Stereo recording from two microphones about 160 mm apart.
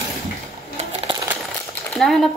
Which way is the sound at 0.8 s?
40° right (ahead or behind).